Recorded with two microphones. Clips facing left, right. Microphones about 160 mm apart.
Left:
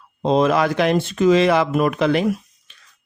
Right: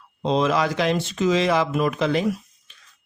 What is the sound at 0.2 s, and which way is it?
Speech, 50° left (ahead or behind).